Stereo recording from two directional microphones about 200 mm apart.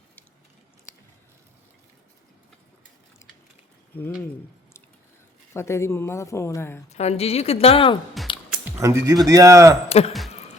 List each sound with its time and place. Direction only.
5.5 s a woman's voice: 15° left (ahead or behind)
6.9 s speech: 30° left (ahead or behind)
8.2 s a sound: centre (ahead or behind)
8.5 s speech: 10° right (ahead or behind)